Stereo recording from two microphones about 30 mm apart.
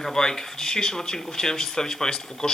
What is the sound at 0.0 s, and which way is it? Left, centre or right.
A man's voice, centre.